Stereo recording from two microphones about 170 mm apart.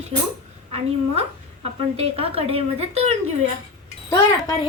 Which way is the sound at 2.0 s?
35° right (ahead or behind).